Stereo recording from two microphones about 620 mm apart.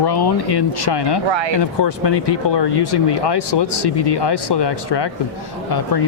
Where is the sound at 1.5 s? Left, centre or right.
Left.